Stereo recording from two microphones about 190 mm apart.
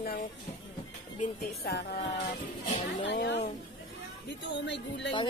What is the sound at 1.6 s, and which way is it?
Music, 55° left (ahead or behind).